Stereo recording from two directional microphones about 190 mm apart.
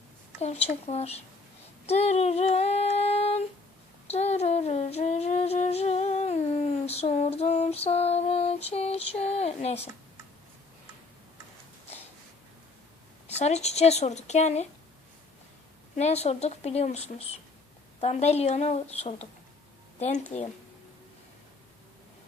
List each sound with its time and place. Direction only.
0.3 s a woman's voice: 35° left (ahead or behind)
1.9 s female singing: 35° left (ahead or behind)
4.0 s humming: 35° left (ahead or behind)
13.4 s a woman's voice: 35° left (ahead or behind)
16.0 s a woman's voice: 35° left (ahead or behind)